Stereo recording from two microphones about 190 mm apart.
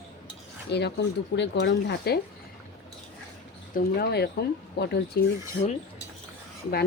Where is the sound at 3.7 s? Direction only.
55° left (ahead or behind).